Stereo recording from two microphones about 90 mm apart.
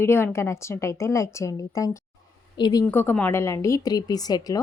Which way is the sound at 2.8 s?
25° left (ahead or behind).